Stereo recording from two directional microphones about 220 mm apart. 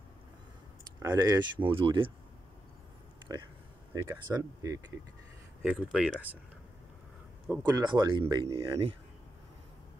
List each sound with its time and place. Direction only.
0.9 s speech: 15° right (ahead or behind)
3.3 s speech: 15° right (ahead or behind)
7.4 s speech: 10° right (ahead or behind)
7.8 s speech: 20° right (ahead or behind)